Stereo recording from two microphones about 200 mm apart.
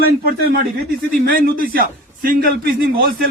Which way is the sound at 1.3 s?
45° right (ahead or behind).